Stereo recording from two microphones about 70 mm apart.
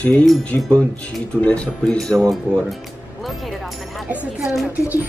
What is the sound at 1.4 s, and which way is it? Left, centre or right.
Speech, centre.